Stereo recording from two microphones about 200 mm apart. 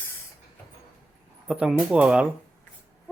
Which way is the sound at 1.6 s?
5° right (ahead or behind).